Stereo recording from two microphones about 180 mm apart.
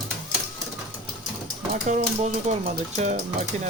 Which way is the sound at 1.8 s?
35° right (ahead or behind).